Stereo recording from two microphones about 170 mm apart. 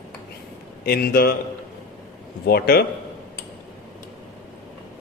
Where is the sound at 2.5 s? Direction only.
65° left (ahead or behind).